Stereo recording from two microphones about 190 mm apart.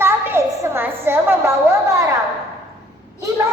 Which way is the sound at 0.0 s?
15° right (ahead or behind).